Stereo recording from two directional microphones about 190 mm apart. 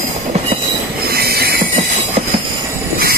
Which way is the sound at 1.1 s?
55° right (ahead or behind).